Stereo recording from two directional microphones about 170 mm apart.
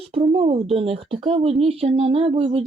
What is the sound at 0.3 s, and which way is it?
A woman's voice, 35° right (ahead or behind).